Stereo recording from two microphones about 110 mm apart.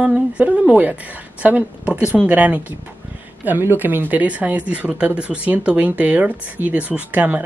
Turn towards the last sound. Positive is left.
turn(degrees=-15)  # may be behind; listen again after turning